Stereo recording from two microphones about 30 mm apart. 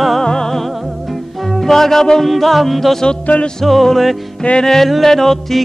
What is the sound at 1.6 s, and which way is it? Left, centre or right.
Music, centre.